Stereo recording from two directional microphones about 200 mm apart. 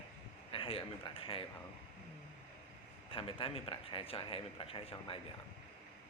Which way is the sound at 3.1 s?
25° left (ahead or behind).